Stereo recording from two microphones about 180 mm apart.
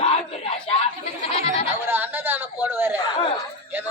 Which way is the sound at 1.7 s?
10° right (ahead or behind).